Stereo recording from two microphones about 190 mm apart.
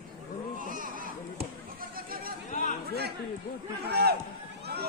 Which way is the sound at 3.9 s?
60° right (ahead or behind).